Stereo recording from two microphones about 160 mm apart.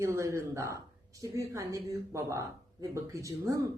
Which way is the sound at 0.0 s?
20° right (ahead or behind).